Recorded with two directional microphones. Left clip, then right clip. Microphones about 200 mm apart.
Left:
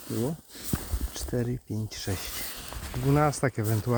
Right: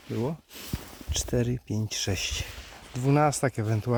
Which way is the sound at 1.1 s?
25° right (ahead or behind).